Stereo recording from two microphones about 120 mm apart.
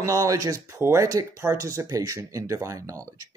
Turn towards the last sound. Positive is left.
turn(degrees=-30)  # may be behind; listen again after turning